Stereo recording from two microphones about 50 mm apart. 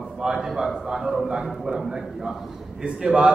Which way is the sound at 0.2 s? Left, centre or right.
Centre.